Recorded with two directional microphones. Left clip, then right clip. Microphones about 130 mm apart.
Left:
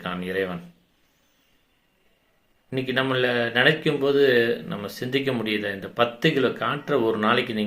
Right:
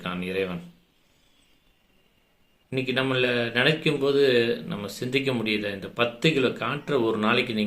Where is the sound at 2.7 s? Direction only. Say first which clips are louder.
Left 1 dB; 20° right (ahead or behind).